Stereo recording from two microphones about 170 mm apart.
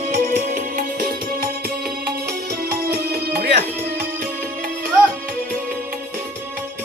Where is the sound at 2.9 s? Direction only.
65° right (ahead or behind).